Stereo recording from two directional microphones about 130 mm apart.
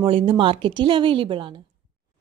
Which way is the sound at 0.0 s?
45° right (ahead or behind).